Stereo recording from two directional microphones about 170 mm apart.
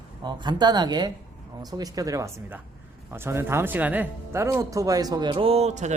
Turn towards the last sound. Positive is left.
turn(degrees=-40)  # may be behind; listen again after turning